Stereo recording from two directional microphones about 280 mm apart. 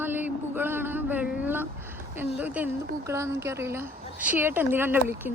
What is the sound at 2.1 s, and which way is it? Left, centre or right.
A woman's voice, centre.